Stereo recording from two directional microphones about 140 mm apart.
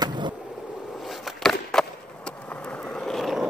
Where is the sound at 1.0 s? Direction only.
Centre (ahead or behind).